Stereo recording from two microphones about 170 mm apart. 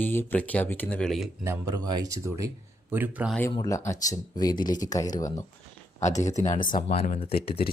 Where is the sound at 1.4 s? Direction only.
20° right (ahead or behind).